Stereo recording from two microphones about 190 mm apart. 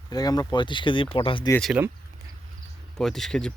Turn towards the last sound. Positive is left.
turn(degrees=5)  # may be behind; listen again after turning